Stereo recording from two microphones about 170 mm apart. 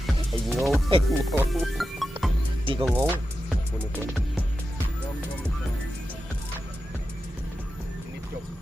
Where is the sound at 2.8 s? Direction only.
10° right (ahead or behind).